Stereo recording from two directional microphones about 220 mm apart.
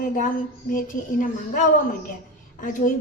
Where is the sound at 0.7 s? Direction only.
40° left (ahead or behind).